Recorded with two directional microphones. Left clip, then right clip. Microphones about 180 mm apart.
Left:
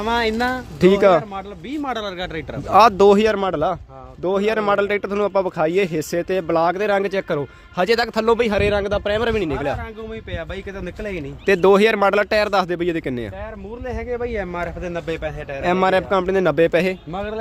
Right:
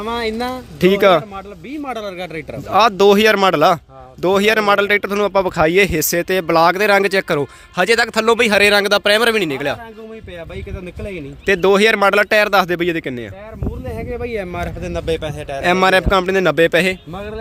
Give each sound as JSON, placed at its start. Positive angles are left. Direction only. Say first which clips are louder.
{"t": 0.0, "sound": "speech", "louder": "left 1 dB", "side_deg": -5}
{"t": 1.8, "sound": "speech", "louder": "even", "side_deg": -20}
{"t": 2.6, "sound": "speech", "louder": "even", "side_deg": 5}
{"t": 3.3, "sound": "a man's voice", "louder": "right 8 dB", "side_deg": -15}
{"t": 7.9, "sound": "a man's voice", "louder": "right 3 dB", "side_deg": -5}
{"t": 11.4, "sound": "speech", "louder": "right 1 dB", "side_deg": 5}
{"t": 14.1, "sound": "a man's voice", "louder": "right 1 dB", "side_deg": -45}
{"t": 15.6, "sound": "speech", "louder": "right 4 dB", "side_deg": -10}